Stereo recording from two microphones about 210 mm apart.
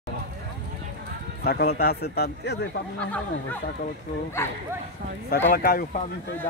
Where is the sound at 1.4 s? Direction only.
45° left (ahead or behind).